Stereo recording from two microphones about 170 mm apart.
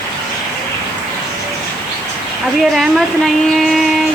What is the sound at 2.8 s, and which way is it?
Speech, centre (ahead or behind).